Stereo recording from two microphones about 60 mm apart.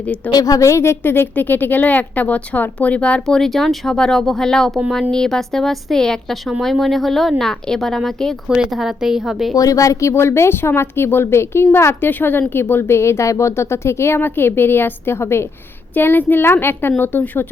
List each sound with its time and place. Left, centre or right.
0.3 s a woman's voice: left
3.2 s speech: centre
8.7 s speech: centre
9.6 s a woman's voice: left